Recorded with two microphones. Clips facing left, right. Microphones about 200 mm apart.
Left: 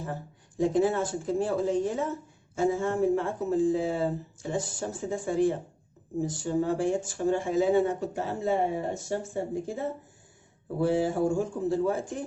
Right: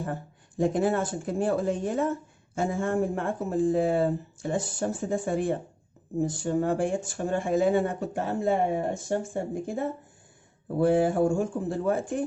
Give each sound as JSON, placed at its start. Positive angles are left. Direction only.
{"t": 0.6, "sound": "speech", "side_deg": -55}